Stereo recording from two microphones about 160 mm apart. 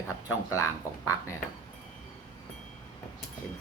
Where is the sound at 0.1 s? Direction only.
15° left (ahead or behind).